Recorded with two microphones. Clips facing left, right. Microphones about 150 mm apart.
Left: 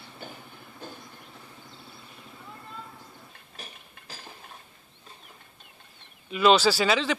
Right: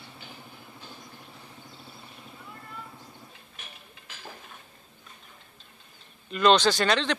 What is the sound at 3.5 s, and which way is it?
Ratchet, 35° left (ahead or behind).